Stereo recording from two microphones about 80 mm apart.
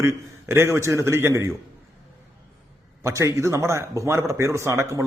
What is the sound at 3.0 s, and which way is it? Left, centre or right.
A man's voice, right.